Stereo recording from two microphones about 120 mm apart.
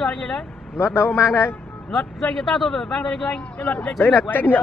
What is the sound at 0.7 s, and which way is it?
Speech, 20° left (ahead or behind).